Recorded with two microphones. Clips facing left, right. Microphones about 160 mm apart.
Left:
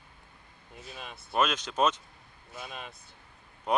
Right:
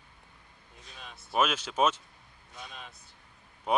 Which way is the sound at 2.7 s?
65° left (ahead or behind).